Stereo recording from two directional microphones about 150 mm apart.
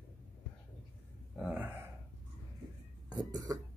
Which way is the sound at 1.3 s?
5° right (ahead or behind).